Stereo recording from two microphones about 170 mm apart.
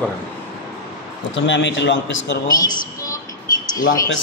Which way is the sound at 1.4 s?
90° left.